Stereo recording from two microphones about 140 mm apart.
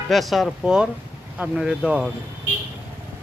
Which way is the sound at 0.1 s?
Centre (ahead or behind).